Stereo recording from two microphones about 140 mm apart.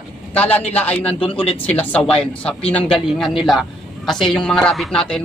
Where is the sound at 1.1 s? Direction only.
40° left (ahead or behind).